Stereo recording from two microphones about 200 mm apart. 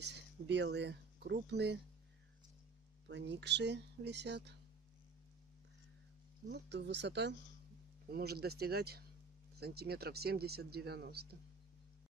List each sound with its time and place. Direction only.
0.0 s speech: 60° right (ahead or behind)
3.1 s speech: 60° right (ahead or behind)
6.5 s speech: 60° right (ahead or behind)